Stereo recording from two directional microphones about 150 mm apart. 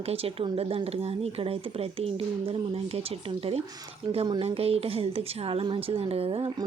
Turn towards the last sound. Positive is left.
turn(degrees=-40)  # may be behind; listen again after turning